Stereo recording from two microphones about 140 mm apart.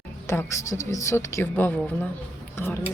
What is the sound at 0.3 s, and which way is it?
A woman's voice, 20° left (ahead or behind).